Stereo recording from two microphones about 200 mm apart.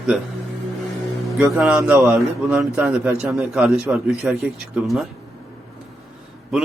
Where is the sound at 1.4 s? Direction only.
5° right (ahead or behind).